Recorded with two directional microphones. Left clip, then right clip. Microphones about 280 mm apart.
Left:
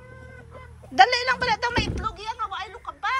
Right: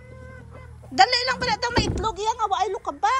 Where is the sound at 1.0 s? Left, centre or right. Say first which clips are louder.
Left 1 dB; centre.